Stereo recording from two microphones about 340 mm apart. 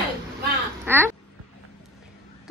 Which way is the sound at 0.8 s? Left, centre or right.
Centre.